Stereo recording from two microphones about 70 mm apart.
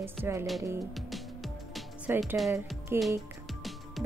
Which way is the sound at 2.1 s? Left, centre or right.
Right.